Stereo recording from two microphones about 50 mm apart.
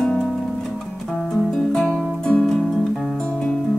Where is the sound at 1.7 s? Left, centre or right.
Centre.